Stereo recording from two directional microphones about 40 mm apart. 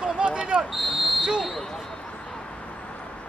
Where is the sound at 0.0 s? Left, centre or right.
Right.